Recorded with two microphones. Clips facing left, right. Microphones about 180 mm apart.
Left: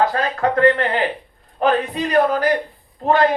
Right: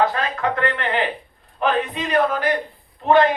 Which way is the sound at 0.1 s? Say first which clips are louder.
Left 4 dB; 40° left (ahead or behind).